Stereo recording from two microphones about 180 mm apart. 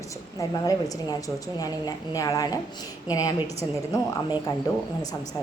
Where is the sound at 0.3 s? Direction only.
20° left (ahead or behind).